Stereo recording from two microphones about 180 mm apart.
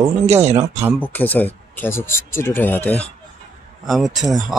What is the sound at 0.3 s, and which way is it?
Speech, 40° right (ahead or behind).